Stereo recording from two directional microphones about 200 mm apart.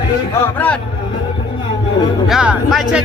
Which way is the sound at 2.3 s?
5° right (ahead or behind).